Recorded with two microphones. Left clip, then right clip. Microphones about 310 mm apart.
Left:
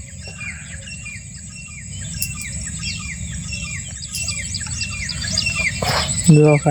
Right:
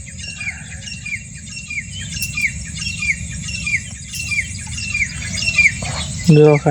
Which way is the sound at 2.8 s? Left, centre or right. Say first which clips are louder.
Right 10 dB; right.